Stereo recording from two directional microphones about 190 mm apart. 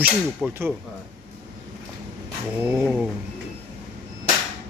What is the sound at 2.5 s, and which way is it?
Speech, 10° right (ahead or behind).